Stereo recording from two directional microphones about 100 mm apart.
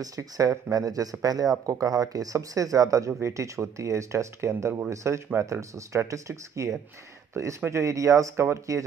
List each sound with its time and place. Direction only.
0.0 s speech: 35° right (ahead or behind)